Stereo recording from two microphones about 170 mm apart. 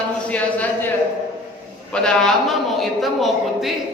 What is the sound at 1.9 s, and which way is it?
A man's voice, 5° left (ahead or behind).